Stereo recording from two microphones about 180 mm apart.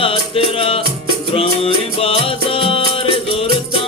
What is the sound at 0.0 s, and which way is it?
Music, 30° left (ahead or behind).